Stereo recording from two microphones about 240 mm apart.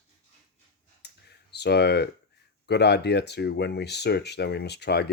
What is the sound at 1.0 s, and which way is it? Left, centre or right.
Clicking, left.